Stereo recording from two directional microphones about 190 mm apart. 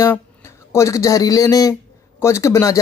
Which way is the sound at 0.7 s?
15° left (ahead or behind).